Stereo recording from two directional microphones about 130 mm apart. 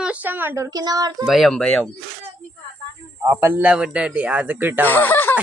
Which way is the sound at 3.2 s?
15° right (ahead or behind).